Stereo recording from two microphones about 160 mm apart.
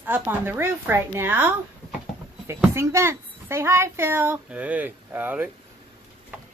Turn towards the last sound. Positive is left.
turn(degrees=-10)  # may be behind; listen again after turning